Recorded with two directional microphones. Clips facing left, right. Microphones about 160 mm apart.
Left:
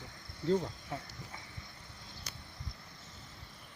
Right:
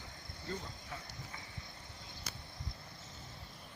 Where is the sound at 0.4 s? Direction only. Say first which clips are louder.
Left 13 dB; 80° left.